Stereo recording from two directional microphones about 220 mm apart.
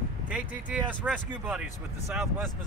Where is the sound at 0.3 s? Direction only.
5° right (ahead or behind).